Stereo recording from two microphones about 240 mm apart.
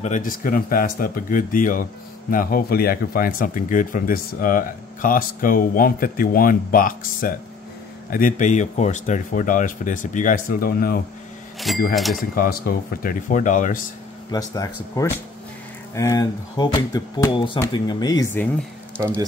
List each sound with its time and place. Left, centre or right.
0.0 s speech: left
11.9 s speech: centre
12.2 s speech: left
14.3 s speech: centre